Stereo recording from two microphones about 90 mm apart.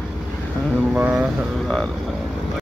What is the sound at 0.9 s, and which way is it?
Speech, 15° right (ahead or behind).